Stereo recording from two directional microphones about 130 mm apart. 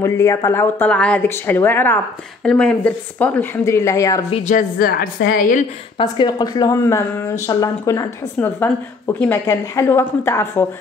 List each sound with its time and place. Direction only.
0.0 s speech: 20° left (ahead or behind)
3.6 s a woman's voice: 25° left (ahead or behind)
4.5 s a woman's voice: 90° left
5.9 s a woman's voice: 35° left (ahead or behind)
8.4 s a woman's voice: 15° left (ahead or behind)